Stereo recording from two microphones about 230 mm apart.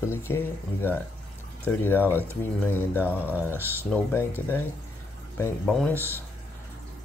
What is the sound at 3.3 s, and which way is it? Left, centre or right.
Speech, centre.